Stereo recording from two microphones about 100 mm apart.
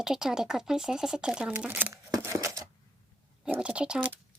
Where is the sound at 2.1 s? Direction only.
30° right (ahead or behind).